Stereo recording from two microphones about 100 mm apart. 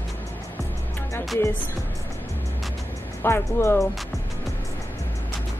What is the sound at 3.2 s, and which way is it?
Speech, 25° left (ahead or behind).